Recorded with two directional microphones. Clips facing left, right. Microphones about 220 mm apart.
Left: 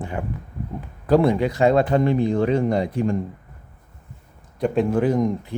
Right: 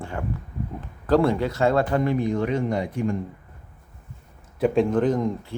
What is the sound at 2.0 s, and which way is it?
Speech, 30° left (ahead or behind).